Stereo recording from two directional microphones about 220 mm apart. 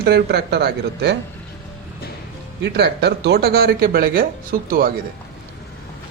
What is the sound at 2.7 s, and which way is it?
Speech, 50° right (ahead or behind).